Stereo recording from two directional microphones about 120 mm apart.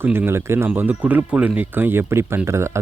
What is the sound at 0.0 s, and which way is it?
Speech, 20° right (ahead or behind).